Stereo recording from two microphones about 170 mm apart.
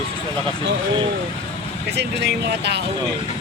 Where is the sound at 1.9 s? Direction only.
80° right.